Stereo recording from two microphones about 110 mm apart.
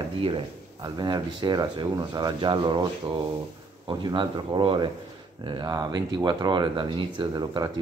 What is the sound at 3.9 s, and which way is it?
Speech, 45° right (ahead or behind).